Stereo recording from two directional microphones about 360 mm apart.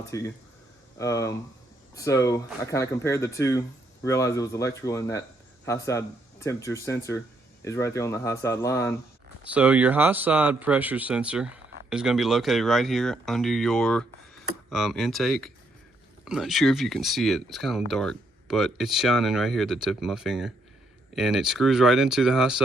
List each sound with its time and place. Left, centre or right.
0.1 s speech: centre
9.4 s speech: centre